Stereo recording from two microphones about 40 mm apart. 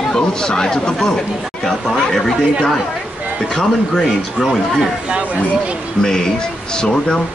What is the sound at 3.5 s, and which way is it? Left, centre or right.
Speech, centre.